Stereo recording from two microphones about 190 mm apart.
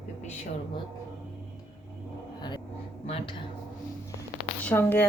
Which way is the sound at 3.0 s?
30° left (ahead or behind).